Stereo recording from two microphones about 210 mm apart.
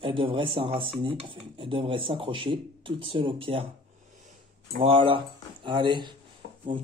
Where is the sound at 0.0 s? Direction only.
25° right (ahead or behind).